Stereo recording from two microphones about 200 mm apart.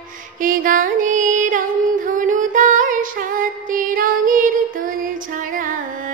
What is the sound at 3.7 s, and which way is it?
Music, 45° right (ahead or behind).